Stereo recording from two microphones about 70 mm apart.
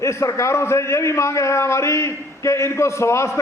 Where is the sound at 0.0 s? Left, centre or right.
Left.